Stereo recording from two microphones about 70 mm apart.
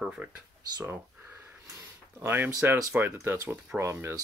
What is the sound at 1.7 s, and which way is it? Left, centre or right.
Speech, right.